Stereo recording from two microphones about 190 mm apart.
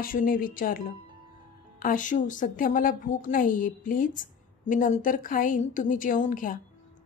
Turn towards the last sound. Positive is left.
turn(degrees=45)  # may be behind; listen again after turning